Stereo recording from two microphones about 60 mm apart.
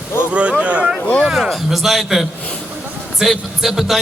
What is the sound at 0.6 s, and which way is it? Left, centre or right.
Speech, centre.